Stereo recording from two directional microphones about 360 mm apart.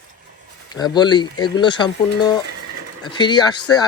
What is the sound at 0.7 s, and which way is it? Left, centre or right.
Speech, centre.